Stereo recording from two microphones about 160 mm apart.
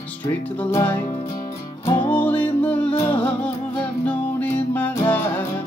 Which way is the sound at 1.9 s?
30° left (ahead or behind).